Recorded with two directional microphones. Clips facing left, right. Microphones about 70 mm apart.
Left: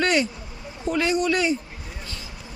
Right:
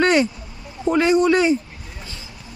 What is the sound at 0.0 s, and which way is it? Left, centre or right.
Vehicle, right.